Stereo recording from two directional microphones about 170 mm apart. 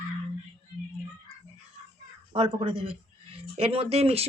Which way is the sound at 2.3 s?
35° right (ahead or behind).